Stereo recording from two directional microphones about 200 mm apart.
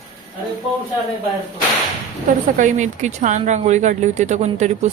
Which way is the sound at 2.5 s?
40° right (ahead or behind).